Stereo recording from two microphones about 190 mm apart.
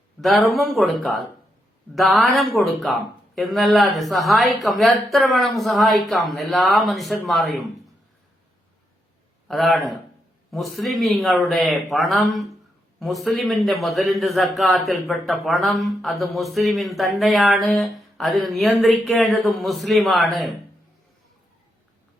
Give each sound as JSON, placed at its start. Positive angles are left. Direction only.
{"t": 0.2, "sound": "a man's voice", "side_deg": 0}
{"t": 9.5, "sound": "a man's voice", "side_deg": 0}